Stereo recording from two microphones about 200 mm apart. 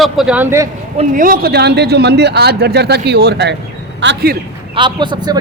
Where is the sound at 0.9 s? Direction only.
40° right (ahead or behind).